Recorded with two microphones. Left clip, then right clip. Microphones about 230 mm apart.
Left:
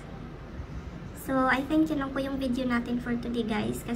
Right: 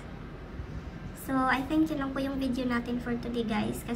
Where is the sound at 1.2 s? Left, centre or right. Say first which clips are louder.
Left 2 dB; centre.